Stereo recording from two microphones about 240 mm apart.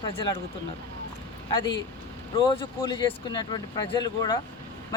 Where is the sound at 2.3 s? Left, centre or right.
Left.